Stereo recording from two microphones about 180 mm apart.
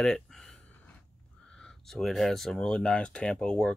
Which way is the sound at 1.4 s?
5° left (ahead or behind).